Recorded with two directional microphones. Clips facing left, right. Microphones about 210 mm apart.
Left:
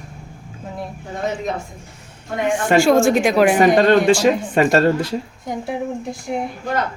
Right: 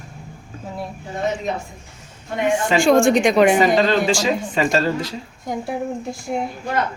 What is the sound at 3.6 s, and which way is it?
Speech, 55° left (ahead or behind).